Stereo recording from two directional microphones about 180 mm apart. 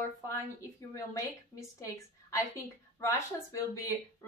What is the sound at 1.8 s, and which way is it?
Speech, 15° left (ahead or behind).